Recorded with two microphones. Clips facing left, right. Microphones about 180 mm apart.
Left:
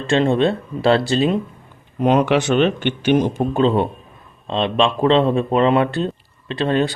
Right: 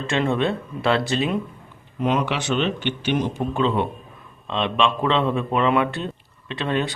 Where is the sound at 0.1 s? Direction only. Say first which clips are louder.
Left 6 dB; 30° left (ahead or behind).